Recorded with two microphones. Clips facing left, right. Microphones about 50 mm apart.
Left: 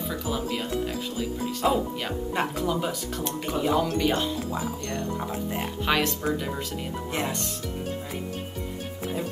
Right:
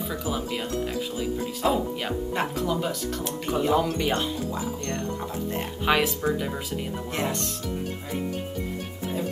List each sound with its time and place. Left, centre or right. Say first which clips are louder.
1.4 s speech: left 1 dB; centre
5.9 s speech: right 2 dB; centre